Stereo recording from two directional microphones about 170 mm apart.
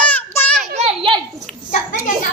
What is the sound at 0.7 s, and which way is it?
Speech, 35° right (ahead or behind).